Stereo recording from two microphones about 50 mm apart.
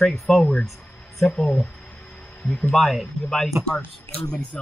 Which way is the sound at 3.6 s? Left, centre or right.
Right.